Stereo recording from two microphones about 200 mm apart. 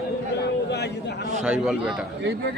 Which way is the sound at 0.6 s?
55° left (ahead or behind).